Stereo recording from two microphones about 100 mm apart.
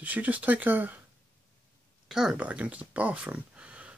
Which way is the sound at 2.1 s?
5° right (ahead or behind).